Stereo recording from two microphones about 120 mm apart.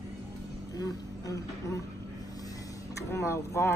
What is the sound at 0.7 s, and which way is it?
Speech, 30° left (ahead or behind).